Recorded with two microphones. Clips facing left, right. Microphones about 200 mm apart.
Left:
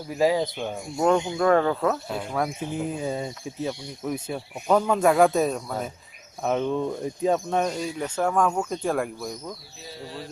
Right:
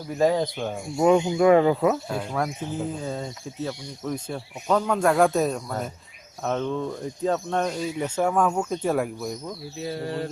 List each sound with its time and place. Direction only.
0.2 s speech: 5° left (ahead or behind)
2.0 s speech: centre (ahead or behind)
2.7 s speech: 15° left (ahead or behind); by 9.6 s 5° right (ahead or behind)
9.8 s a sound: 60° right (ahead or behind)